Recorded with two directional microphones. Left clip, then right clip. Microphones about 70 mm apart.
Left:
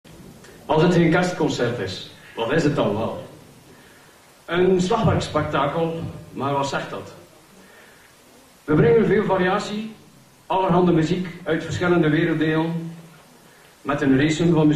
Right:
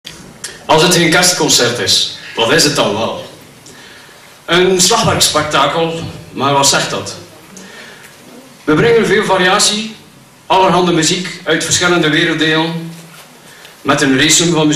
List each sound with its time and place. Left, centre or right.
0.7 s a man's voice: centre
4.5 s a man's voice: left
8.6 s a man's voice: left
13.8 s a man's voice: left